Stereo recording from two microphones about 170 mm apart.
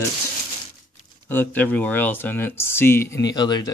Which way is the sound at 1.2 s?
10° left (ahead or behind).